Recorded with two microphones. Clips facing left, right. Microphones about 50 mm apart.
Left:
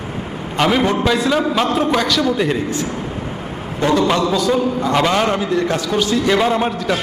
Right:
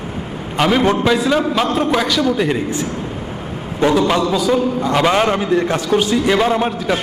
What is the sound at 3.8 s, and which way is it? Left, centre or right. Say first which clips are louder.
A man's voice: right 1 dB; centre.